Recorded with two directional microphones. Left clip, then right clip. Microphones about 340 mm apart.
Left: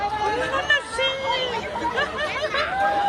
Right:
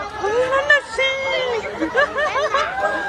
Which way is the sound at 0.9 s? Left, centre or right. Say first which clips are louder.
Right 3 dB; centre.